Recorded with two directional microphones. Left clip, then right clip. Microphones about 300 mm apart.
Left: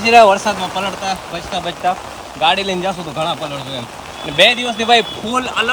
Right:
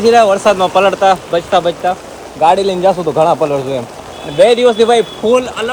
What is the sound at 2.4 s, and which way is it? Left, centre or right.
Speech, left.